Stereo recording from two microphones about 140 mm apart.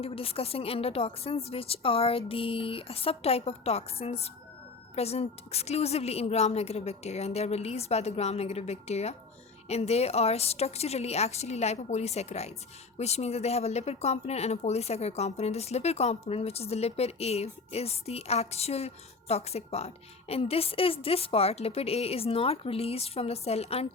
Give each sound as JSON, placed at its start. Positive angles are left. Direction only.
{"t": 0.0, "sound": "speech", "side_deg": 45}